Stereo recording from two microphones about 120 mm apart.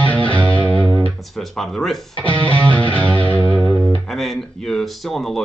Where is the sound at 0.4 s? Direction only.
10° left (ahead or behind).